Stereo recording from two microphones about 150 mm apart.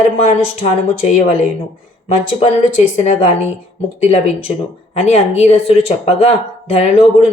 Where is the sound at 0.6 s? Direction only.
45° left (ahead or behind).